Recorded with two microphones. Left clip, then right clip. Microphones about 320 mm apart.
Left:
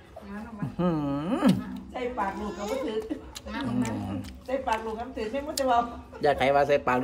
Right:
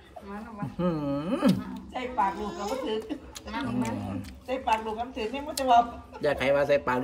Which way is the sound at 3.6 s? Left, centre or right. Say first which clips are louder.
Left 2 dB; centre.